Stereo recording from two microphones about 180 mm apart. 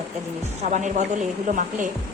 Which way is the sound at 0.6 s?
40° right (ahead or behind).